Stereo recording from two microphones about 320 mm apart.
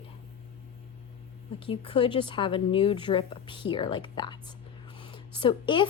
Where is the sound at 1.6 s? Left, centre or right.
Centre.